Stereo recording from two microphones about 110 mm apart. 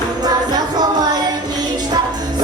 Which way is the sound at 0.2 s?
35° right (ahead or behind).